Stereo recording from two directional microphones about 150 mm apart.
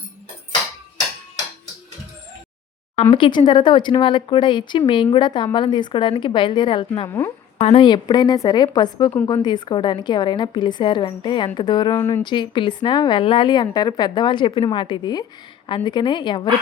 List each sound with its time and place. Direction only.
2.9 s a woman's voice: 40° left (ahead or behind); by 12.2 s 20° left (ahead or behind)
12.2 s a woman's voice: 30° left (ahead or behind)